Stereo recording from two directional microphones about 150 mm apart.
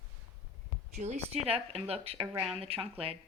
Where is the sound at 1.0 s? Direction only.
45° right (ahead or behind).